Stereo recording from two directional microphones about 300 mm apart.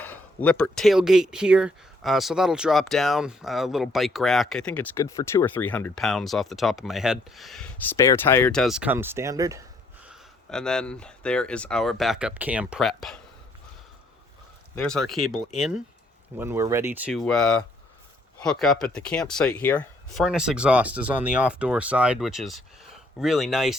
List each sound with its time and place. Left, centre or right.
0.0 s speech: centre
14.8 s speech: centre